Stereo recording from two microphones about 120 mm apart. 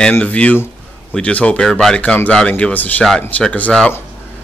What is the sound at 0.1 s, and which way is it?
Speech, 10° left (ahead or behind).